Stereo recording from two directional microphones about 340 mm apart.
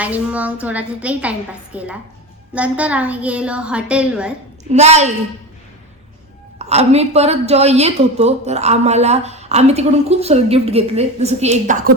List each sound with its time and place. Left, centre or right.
0.0 s a woman's voice: centre
4.7 s a woman's voice: centre
6.6 s a woman's voice: centre